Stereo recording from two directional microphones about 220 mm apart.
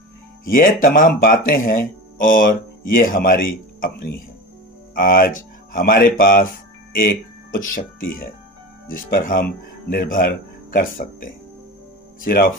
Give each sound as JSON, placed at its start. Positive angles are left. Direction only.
{"t": 0.4, "sound": "speech", "side_deg": 40}